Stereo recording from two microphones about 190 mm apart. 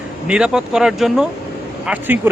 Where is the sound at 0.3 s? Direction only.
5° right (ahead or behind).